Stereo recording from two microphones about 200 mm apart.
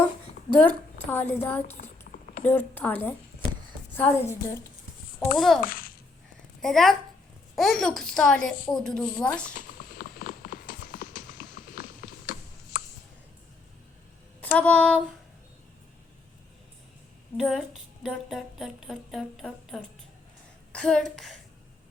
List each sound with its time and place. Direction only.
0.7 s a woman's voice: 10° left (ahead or behind)
1.7 s a sound: 35° left (ahead or behind)
2.4 s a woman's voice: 10° left (ahead or behind)
5.4 s speech: centre (ahead or behind)
5.6 s a child's voice: 45° left (ahead or behind)
6.6 s speech: centre (ahead or behind)
9.6 s clip-clop: 45° left (ahead or behind)
14.4 s a sound: 10° left (ahead or behind)
17.3 s speech: centre (ahead or behind)